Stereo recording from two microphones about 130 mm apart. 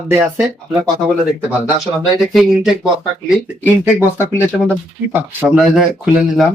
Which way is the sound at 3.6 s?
20° left (ahead or behind).